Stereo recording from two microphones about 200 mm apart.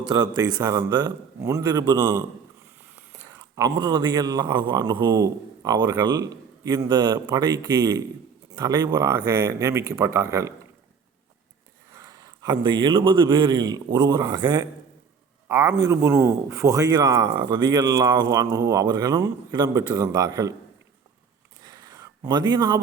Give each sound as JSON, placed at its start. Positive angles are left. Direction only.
{"t": 0.0, "sound": "a man's voice", "side_deg": -20}
{"t": 11.9, "sound": "a man's voice", "side_deg": -15}
{"t": 21.6, "sound": "a sound", "side_deg": -20}